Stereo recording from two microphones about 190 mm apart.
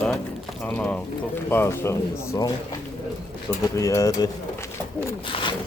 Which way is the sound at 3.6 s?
15° left (ahead or behind).